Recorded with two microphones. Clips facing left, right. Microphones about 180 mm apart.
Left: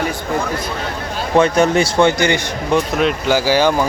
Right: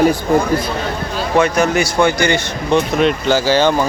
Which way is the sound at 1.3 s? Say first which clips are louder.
Left 1 dB; 30° left (ahead or behind).